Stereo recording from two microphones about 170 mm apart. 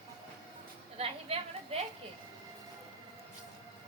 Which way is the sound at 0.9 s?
35° right (ahead or behind).